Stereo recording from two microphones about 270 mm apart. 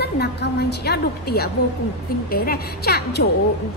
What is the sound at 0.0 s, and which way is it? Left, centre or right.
A woman's voice, left.